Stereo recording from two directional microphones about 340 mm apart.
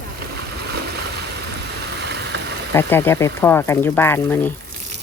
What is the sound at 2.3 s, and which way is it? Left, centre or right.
Engine, right.